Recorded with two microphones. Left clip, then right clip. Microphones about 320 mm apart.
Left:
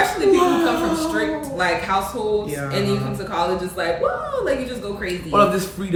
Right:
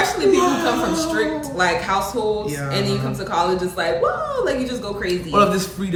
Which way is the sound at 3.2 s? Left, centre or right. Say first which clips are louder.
Right 3 dB; centre.